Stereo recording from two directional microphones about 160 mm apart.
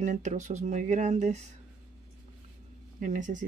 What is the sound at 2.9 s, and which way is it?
Speech, 55° right (ahead or behind).